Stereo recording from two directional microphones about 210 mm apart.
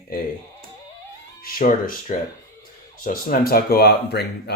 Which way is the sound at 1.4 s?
40° left (ahead or behind).